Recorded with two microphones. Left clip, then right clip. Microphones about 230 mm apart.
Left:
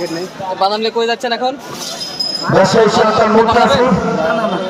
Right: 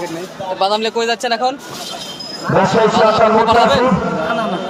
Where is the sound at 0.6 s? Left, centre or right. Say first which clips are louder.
Left 1 dB; right.